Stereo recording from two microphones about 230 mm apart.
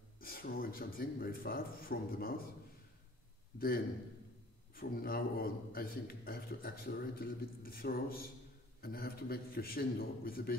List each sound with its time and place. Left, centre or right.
0.2 s a man's voice: left
3.5 s a man's voice: left